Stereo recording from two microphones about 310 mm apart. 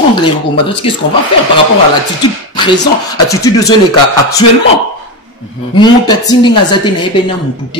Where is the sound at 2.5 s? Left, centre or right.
Centre.